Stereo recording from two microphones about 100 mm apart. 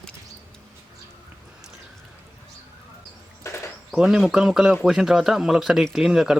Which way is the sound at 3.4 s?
25° left (ahead or behind).